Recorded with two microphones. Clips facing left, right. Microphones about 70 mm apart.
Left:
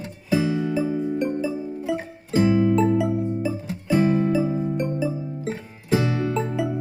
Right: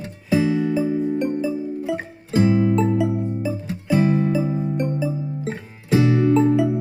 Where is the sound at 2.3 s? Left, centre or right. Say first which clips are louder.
Right 1 dB; right.